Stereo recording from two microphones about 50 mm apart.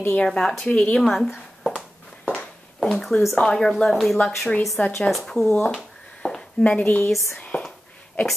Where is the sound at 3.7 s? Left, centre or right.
Centre.